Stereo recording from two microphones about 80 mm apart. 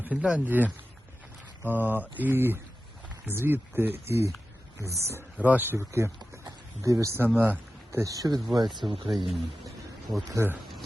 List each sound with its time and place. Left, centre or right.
0.0 s a man's voice: centre; by 5.2 s right
5.4 s a man's voice: right
7.3 s speech: right
7.9 s speech: right
9.1 s speech: centre
10.3 s speech: right